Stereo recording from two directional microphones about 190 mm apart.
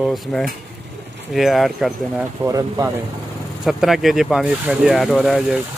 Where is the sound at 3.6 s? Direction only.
Centre (ahead or behind).